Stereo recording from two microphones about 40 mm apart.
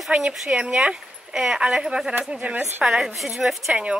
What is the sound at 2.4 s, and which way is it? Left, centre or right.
Speech, right.